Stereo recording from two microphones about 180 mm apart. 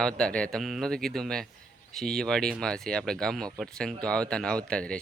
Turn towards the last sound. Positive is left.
turn(degrees=5)  # may be behind; listen again after turning